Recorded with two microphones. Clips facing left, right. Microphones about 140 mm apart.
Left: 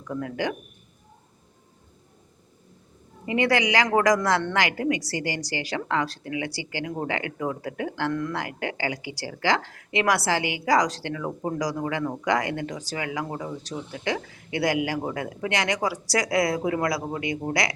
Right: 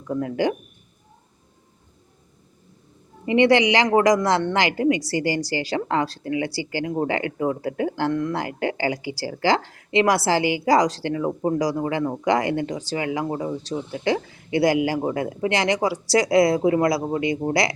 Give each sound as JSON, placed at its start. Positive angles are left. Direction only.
{"t": 0.1, "sound": "speech", "side_deg": -30}
{"t": 3.2, "sound": "speech", "side_deg": -25}